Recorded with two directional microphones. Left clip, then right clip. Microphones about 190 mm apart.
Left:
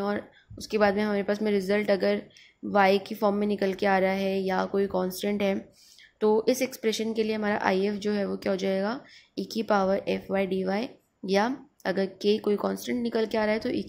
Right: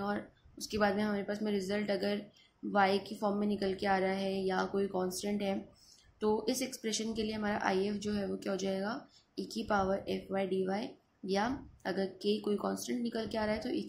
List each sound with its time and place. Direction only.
0.0 s a woman's voice: 35° left (ahead or behind)